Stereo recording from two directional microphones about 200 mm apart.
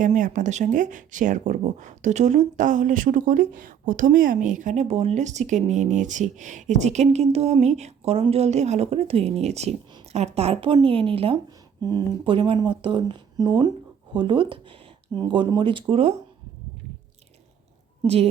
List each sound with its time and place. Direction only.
0.0 s speech: 40° right (ahead or behind)
18.0 s a woman's voice: 30° right (ahead or behind)